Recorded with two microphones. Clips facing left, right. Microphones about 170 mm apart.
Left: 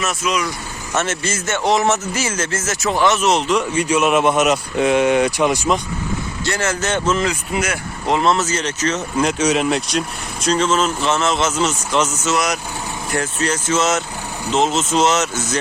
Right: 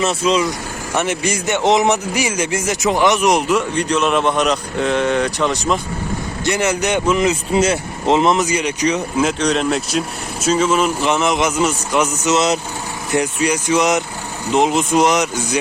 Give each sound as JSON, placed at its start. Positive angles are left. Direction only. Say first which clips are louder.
{"t": 0.0, "sound": "speech", "louder": "right 5 dB", "side_deg": -30}
{"t": 0.9, "sound": "speech", "louder": "right 2 dB", "side_deg": -15}
{"t": 3.8, "sound": "speech", "louder": "left 1 dB", "side_deg": 5}
{"t": 6.4, "sound": "speech", "louder": "right 4 dB", "side_deg": -20}
{"t": 9.2, "sound": "speech", "louder": "left 1 dB", "side_deg": 5}